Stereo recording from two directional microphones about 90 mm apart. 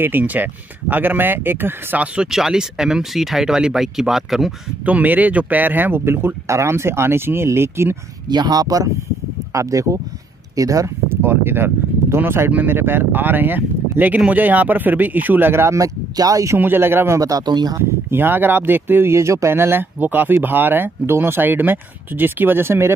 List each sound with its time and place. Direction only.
0.0 s speech: 20° right (ahead or behind)
2.1 s speech: 5° right (ahead or behind)
4.8 s speech: 20° right (ahead or behind)
8.3 s speech: 50° right (ahead or behind)
11.2 s speech: 25° right (ahead or behind); by 16.5 s 40° right (ahead or behind)
16.5 s speech: 25° right (ahead or behind)
17.2 s speech: 45° right (ahead or behind)
17.8 s speech: 25° right (ahead or behind)